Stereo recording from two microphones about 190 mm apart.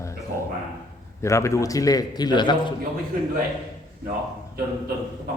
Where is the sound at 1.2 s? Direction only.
15° left (ahead or behind).